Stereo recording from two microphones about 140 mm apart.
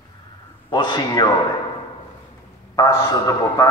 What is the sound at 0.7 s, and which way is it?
Speech, 35° left (ahead or behind).